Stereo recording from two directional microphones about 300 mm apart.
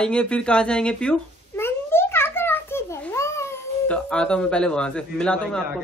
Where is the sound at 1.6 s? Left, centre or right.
Centre.